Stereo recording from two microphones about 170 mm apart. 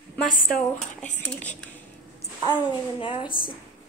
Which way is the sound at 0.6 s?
5° left (ahead or behind).